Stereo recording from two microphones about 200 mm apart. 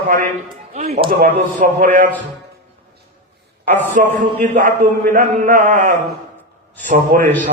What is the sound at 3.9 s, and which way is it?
A man's voice, 40° right (ahead or behind).